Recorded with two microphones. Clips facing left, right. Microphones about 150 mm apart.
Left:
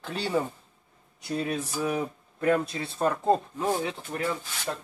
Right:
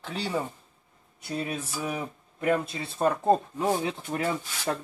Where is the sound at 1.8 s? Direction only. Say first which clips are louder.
Left 4 dB; 10° right (ahead or behind).